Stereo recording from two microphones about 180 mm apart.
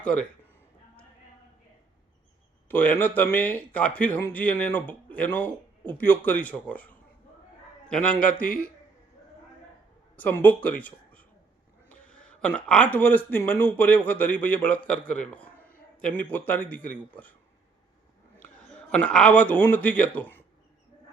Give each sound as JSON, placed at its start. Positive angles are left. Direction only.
{"t": 0.0, "sound": "a man's voice", "side_deg": 5}
{"t": 2.6, "sound": "speech", "side_deg": 10}
{"t": 8.3, "sound": "a man's voice", "side_deg": 50}
{"t": 10.2, "sound": "a man's voice", "side_deg": 10}
{"t": 18.3, "sound": "speech", "side_deg": 5}